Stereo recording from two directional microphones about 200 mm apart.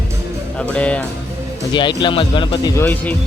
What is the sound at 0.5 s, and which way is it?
Speech, 5° left (ahead or behind).